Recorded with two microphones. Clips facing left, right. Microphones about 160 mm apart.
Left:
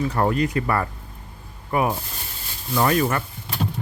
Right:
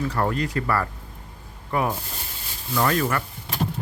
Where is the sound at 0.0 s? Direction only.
20° left (ahead or behind).